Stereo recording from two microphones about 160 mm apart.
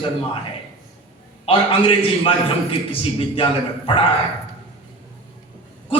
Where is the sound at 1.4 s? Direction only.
35° left (ahead or behind).